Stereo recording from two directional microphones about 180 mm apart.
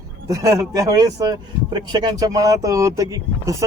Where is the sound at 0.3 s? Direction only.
20° right (ahead or behind).